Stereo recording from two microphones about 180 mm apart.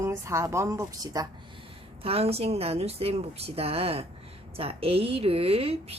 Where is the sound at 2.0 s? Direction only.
35° right (ahead or behind).